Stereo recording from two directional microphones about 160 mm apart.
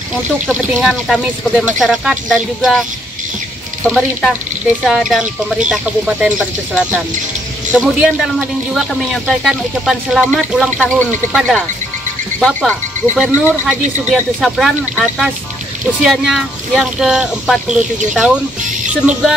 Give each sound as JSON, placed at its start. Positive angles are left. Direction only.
{"t": 0.1, "sound": "speech", "side_deg": 0}
{"t": 10.8, "sound": "speech", "side_deg": 10}